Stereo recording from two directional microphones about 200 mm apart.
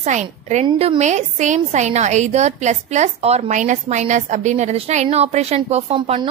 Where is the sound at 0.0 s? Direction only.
35° right (ahead or behind).